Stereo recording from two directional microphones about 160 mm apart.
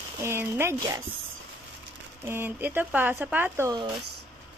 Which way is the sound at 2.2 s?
15° right (ahead or behind).